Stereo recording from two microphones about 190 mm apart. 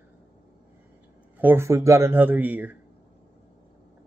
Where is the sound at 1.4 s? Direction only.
10° right (ahead or behind).